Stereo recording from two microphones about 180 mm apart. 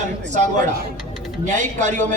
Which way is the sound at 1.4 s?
40° right (ahead or behind).